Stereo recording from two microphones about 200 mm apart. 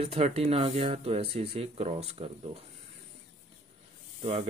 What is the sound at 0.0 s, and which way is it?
Speech, 30° right (ahead or behind).